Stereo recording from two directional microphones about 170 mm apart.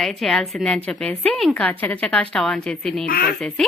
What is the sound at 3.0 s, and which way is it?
Speech, 60° left (ahead or behind).